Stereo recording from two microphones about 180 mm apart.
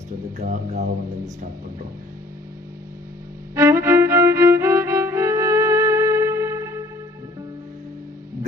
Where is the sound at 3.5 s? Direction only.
15° right (ahead or behind).